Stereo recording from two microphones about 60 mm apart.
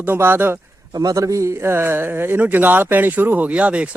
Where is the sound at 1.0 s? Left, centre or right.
Right.